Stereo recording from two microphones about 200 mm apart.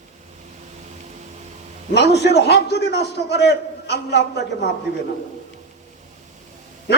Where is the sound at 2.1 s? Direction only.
55° left (ahead or behind).